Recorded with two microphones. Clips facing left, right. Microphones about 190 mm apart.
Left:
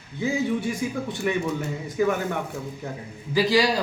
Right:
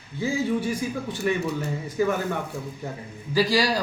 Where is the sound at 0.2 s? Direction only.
20° left (ahead or behind).